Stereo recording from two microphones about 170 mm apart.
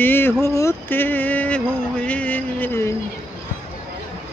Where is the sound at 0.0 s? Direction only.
15° left (ahead or behind).